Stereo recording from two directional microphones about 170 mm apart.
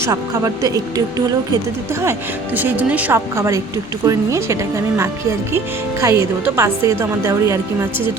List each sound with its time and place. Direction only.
0.0 s speech: 15° right (ahead or behind)
2.6 s a woman's voice: 10° right (ahead or behind)
5.5 s a woman's voice: 20° right (ahead or behind)